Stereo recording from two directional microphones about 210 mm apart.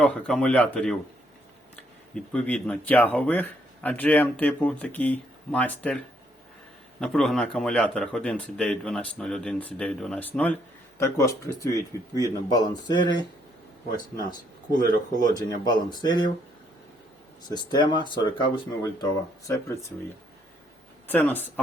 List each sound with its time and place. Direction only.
0.0 s speech: 5° left (ahead or behind)
7.0 s speech: centre (ahead or behind); by 13.2 s 20° left (ahead or behind)
15.3 s speech: 20° left (ahead or behind)
17.5 s speech: 20° left (ahead or behind)
21.1 s speech: 10° left (ahead or behind)